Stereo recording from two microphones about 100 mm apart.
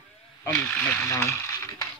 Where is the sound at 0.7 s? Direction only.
15° left (ahead or behind).